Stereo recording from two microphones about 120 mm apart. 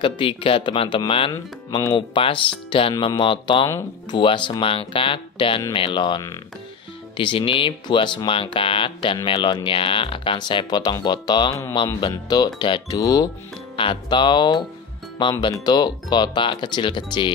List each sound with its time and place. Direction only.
0.0 s speech: 45° left (ahead or behind)
13.7 s speech: 45° left (ahead or behind)
15.6 s speech: 35° left (ahead or behind)